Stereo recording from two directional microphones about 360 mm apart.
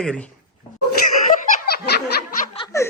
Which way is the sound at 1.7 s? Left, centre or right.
Left.